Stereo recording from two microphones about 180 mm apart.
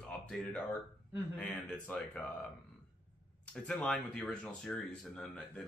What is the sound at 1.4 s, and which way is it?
Speech, 5° left (ahead or behind).